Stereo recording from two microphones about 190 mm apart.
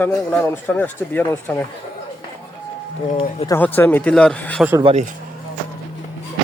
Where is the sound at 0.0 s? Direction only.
5° left (ahead or behind).